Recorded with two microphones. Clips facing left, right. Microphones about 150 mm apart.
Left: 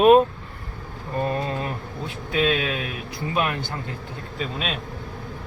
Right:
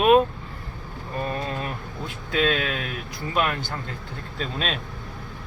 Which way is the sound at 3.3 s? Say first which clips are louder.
Even; 20° left (ahead or behind).